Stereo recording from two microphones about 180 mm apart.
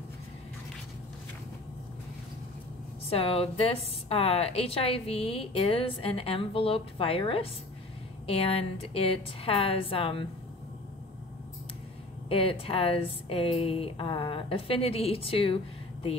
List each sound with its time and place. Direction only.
3.1 s a woman's voice: 30° left (ahead or behind)
12.3 s a woman's voice: 30° left (ahead or behind)